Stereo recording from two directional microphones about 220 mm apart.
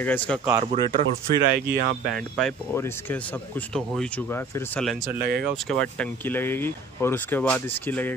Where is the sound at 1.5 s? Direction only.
45° right (ahead or behind).